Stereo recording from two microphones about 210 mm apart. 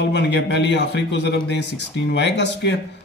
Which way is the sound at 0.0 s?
55° left (ahead or behind).